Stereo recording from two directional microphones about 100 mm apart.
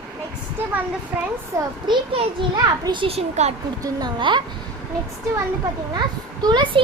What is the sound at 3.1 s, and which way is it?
Speech, 90° right.